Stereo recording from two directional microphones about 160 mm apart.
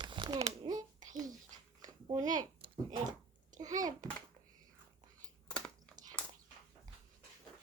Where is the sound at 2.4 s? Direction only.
30° right (ahead or behind).